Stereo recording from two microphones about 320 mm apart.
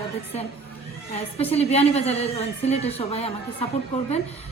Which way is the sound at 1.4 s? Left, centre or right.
Centre.